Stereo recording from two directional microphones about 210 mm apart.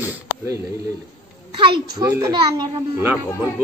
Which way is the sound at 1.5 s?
25° right (ahead or behind).